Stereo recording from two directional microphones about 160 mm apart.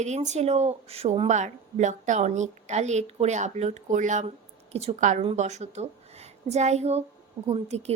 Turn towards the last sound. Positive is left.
turn(degrees=-40)  # may be behind; listen again after turning